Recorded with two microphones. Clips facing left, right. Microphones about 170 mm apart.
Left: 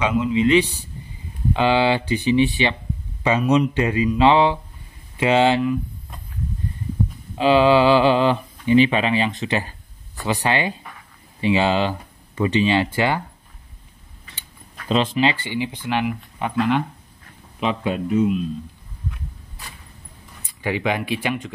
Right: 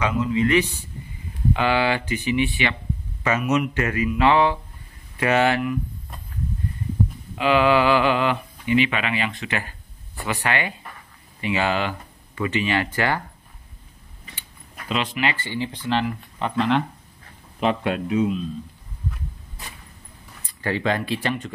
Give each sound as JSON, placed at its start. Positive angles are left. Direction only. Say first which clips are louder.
{"t": 0.1, "sound": "speech", "louder": "left 3 dB", "side_deg": 20}
{"t": 3.5, "sound": "speech", "louder": "left 4 dB", "side_deg": 20}
{"t": 7.3, "sound": "speech", "louder": "left 3 dB", "side_deg": 30}
{"t": 15.4, "sound": "speech", "louder": "left 2 dB", "side_deg": 15}
{"t": 20.6, "sound": "speech", "louder": "left 1 dB", "side_deg": 15}